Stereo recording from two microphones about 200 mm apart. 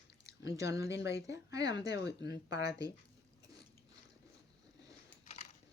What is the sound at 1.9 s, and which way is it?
Speech, 60° left (ahead or behind).